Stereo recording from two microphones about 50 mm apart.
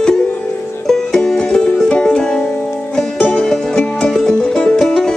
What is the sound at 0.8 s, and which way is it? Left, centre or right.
Music, centre.